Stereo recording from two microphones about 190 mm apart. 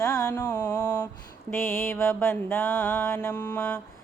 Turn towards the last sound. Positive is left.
turn(degrees=10)  # may be behind; listen again after turning